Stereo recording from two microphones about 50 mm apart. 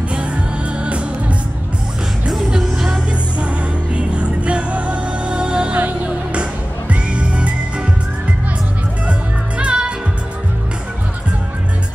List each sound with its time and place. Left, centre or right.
0.1 s music: right
2.2 s music: centre
3.1 s music: right
6.9 s music: right
9.6 s music: right